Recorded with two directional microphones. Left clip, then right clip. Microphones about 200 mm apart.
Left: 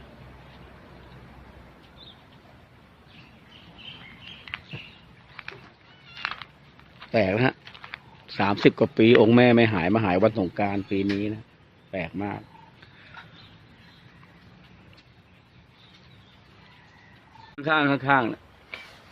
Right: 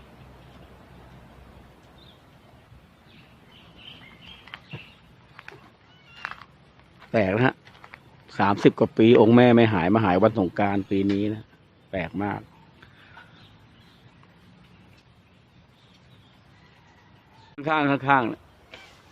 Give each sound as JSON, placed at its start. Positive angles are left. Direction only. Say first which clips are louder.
{"t": 7.0, "sound": "speech", "louder": "even", "side_deg": -10}
{"t": 17.6, "sound": "speech", "louder": "left 1 dB", "side_deg": -5}